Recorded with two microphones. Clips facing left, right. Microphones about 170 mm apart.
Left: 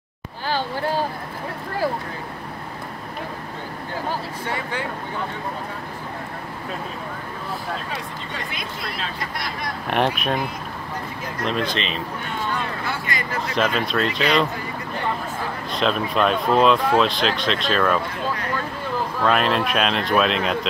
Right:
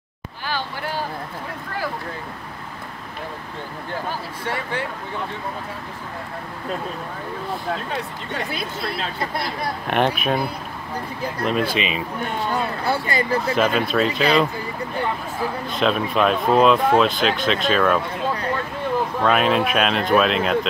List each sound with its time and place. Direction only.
9.8 s speech: centre (ahead or behind)
11.4 s speech: 5° right (ahead or behind)
12.5 s speech: 35° right (ahead or behind)
13.6 s speech: 5° right (ahead or behind)
15.7 s speech: centre (ahead or behind)
19.2 s speech: 5° right (ahead or behind)